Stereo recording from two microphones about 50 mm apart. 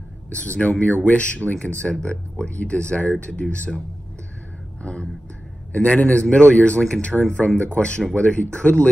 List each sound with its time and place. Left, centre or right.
0.3 s speech: left
5.7 s a man's voice: left